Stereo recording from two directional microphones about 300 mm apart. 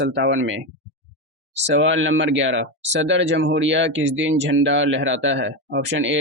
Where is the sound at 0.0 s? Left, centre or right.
Right.